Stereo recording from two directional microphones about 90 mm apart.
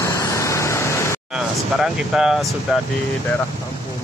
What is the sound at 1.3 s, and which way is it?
Speech, 5° right (ahead or behind).